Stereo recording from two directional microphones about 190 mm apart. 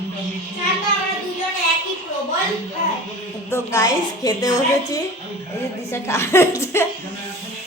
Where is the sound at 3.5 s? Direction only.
15° left (ahead or behind).